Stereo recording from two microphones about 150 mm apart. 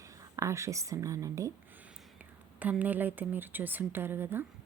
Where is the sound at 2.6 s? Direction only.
10° right (ahead or behind).